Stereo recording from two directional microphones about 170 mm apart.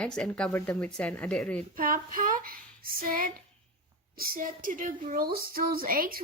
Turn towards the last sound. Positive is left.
turn(degrees=-55)  # may be behind; listen again after turning